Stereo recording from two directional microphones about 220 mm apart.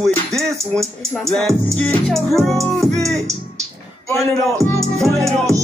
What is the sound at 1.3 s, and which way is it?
Speech, centre (ahead or behind).